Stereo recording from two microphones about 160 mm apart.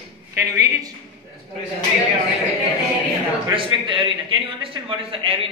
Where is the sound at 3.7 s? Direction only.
30° right (ahead or behind).